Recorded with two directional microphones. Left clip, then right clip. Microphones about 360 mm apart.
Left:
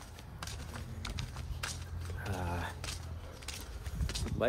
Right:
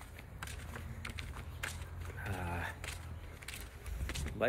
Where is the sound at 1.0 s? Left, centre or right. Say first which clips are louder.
Left 2 dB; centre.